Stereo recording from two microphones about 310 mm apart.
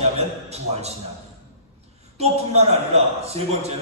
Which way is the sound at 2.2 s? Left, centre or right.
Centre.